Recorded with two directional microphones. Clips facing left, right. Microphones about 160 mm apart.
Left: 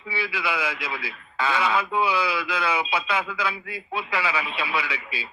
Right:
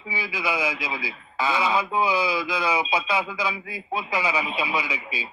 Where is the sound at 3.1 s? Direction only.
10° right (ahead or behind).